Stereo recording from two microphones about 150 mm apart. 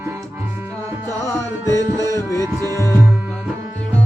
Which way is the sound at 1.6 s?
25° right (ahead or behind).